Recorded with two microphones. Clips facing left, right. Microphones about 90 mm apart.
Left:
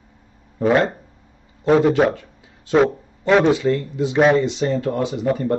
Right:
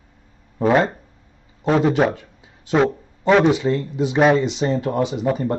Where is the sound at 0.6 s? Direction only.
15° right (ahead or behind).